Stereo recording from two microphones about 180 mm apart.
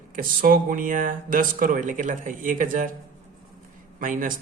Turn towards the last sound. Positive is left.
turn(degrees=-50)  # may be behind; listen again after turning